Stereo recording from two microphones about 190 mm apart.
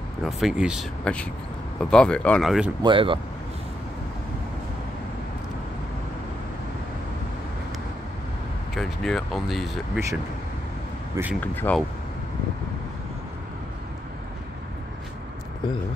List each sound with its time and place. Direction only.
0.2 s speech: centre (ahead or behind)
2.8 s speech: 25° right (ahead or behind)
8.7 s speech: centre (ahead or behind)
11.2 s speech: 20° right (ahead or behind)
11.5 s speech: 10° left (ahead or behind)